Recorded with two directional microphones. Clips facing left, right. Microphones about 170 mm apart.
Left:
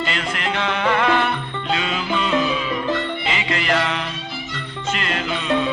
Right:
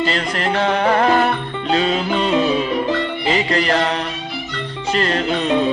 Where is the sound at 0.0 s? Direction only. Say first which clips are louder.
Right 5 dB; 35° right (ahead or behind).